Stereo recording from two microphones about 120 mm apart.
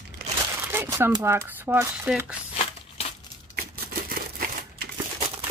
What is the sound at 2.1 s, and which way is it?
Speech, 10° right (ahead or behind).